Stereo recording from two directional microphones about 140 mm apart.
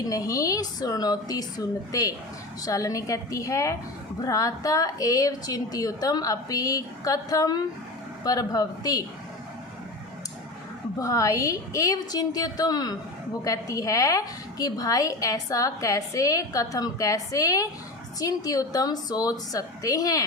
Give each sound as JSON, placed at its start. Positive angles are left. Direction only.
{"t": 0.1, "sound": "a woman's voice", "side_deg": 25}
{"t": 11.0, "sound": "a woman's voice", "side_deg": 25}